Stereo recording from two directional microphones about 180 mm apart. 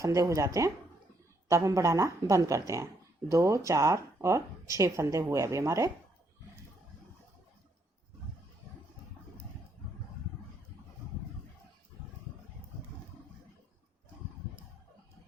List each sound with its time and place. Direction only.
0.0 s speech: 20° right (ahead or behind)